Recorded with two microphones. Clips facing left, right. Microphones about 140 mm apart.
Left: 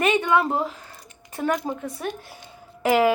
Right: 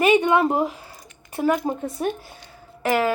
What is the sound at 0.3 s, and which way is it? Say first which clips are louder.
Speech: right 2 dB; 20° right (ahead or behind).